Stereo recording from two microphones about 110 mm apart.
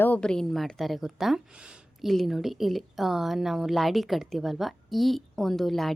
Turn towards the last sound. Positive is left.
turn(degrees=0)  # may be behind; listen again after turning